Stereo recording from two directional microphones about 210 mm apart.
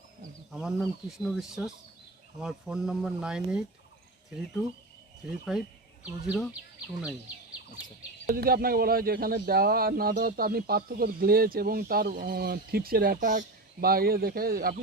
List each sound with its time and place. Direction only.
0.5 s speech: centre (ahead or behind)
5.5 s speech: centre (ahead or behind)
8.3 s speech: 45° right (ahead or behind)